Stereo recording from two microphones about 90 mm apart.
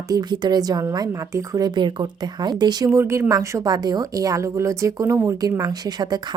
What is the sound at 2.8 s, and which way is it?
A woman's voice, 30° right (ahead or behind).